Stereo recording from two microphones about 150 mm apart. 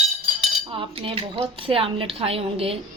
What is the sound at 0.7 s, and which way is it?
Cutlery, 35° right (ahead or behind).